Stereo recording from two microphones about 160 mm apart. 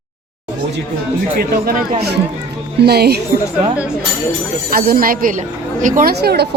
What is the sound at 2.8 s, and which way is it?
Speech, 85° right.